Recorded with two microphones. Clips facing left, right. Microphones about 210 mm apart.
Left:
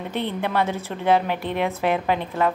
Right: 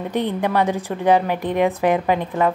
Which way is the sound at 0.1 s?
15° right (ahead or behind).